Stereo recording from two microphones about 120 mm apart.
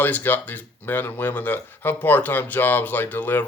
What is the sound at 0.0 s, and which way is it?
Speech, 15° left (ahead or behind).